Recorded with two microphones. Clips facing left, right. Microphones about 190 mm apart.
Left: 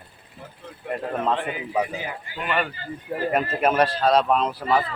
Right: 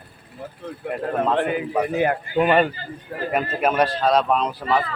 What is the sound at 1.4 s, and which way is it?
Speech, 55° right (ahead or behind).